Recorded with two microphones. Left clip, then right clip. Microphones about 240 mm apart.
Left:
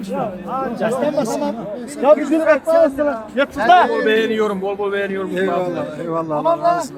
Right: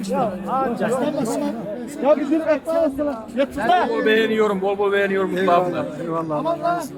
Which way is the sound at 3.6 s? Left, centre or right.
Left.